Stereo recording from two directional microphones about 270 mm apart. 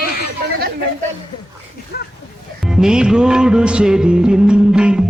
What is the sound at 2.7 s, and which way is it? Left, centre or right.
Music, centre.